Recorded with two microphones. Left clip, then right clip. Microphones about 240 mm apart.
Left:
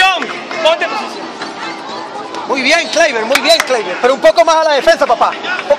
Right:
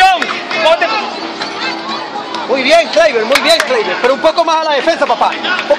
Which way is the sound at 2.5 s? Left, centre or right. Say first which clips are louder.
Right 3 dB; left.